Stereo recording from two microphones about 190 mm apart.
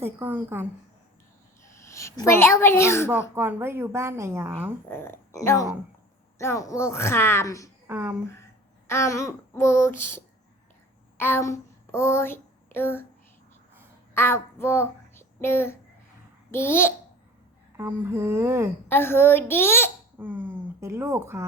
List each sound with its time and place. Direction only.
0.0 s a woman's voice: 10° right (ahead or behind)
1.9 s speech: 15° left (ahead or behind)
3.1 s a woman's voice: 10° right (ahead or behind)
4.9 s speech: 10° left (ahead or behind)
7.9 s speech: 10° right (ahead or behind)
8.9 s speech: 15° left (ahead or behind)
14.1 s speech: 15° left (ahead or behind)
17.7 s a woman's voice: 15° right (ahead or behind)
18.9 s speech: 10° left (ahead or behind)
20.1 s a sound: 10° right (ahead or behind)
20.8 s a woman's voice: 15° right (ahead or behind)